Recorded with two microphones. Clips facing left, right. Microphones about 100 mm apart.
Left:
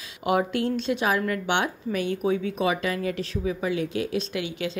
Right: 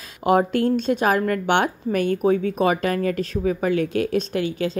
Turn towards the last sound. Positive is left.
turn(degrees=-40)  # may be behind; listen again after turning